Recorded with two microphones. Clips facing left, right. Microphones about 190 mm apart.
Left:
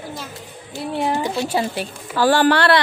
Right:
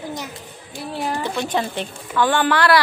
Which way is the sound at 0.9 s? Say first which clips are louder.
Left 3 dB; 20° left (ahead or behind).